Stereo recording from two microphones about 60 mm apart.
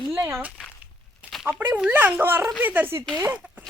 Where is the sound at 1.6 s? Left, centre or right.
Right.